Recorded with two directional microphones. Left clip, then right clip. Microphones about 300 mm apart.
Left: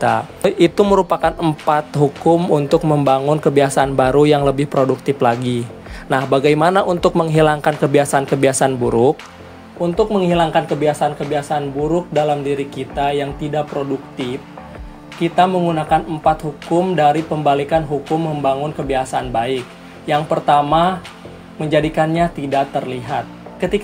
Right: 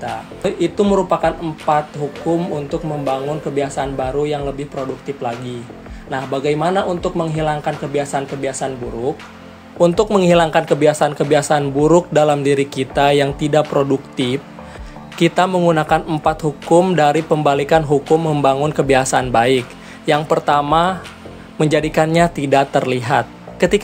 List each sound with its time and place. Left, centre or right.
0.0 s a man's voice: left
9.8 s speech: right